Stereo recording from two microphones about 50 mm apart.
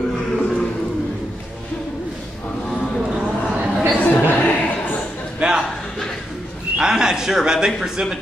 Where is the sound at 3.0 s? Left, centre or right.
Centre.